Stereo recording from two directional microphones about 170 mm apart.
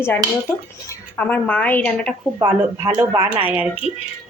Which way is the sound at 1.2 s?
10° left (ahead or behind).